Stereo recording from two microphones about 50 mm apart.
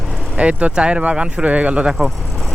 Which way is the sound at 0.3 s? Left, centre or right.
Right.